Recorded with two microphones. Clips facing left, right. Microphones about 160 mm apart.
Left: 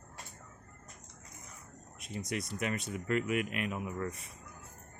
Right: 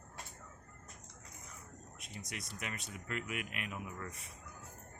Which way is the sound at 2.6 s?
45° left (ahead or behind).